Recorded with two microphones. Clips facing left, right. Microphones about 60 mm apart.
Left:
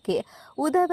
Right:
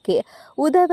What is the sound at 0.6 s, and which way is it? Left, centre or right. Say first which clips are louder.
Speech: right 6 dB; right.